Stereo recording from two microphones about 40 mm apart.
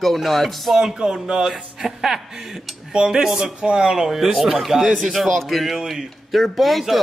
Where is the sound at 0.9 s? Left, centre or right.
Centre.